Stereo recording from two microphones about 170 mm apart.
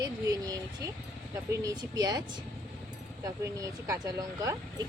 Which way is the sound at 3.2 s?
20° right (ahead or behind).